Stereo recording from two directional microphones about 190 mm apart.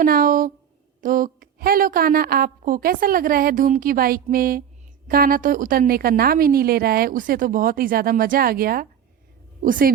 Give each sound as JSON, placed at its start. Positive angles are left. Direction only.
{"t": 0.0, "sound": "a woman's voice", "side_deg": -50}